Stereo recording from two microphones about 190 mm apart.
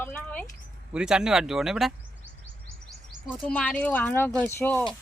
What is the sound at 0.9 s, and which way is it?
Speech, 5° right (ahead or behind).